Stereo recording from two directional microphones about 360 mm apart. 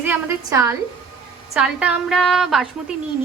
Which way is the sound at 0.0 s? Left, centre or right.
Centre.